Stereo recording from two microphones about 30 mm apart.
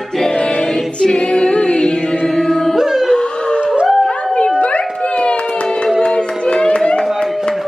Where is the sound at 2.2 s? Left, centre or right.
Centre.